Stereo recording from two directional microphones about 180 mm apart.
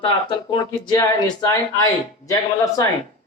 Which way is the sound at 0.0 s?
30° left (ahead or behind).